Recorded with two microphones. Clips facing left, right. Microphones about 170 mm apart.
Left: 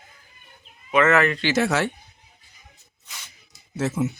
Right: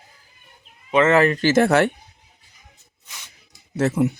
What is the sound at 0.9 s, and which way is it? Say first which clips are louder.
Speech: right 3 dB; 30° right (ahead or behind).